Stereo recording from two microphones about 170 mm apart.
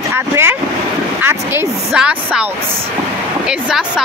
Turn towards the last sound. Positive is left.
turn(degrees=-5)  # may be behind; listen again after turning